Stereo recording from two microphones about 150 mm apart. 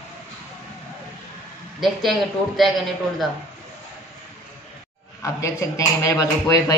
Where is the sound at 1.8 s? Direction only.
Centre (ahead or behind).